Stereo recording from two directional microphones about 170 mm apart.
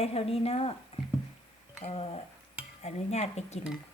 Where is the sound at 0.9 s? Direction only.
35° left (ahead or behind).